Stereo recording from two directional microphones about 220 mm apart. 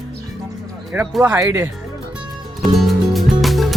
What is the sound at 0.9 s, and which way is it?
Speech, 10° right (ahead or behind).